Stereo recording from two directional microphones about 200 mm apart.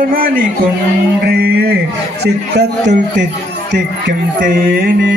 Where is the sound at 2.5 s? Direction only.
60° right (ahead or behind).